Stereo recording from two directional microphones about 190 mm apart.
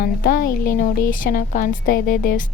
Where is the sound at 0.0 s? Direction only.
50° left (ahead or behind).